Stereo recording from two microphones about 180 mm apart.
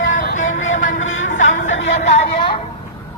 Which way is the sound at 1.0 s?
90° left.